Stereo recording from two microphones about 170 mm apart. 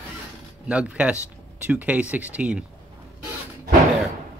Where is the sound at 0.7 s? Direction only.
5° right (ahead or behind).